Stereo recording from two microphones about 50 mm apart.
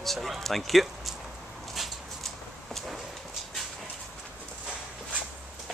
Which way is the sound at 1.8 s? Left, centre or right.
Centre.